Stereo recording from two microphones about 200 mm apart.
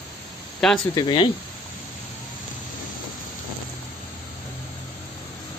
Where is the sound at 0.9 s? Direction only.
25° left (ahead or behind).